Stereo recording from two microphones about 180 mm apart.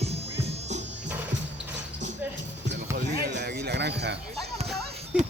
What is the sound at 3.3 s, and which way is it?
Music, 65° right (ahead or behind).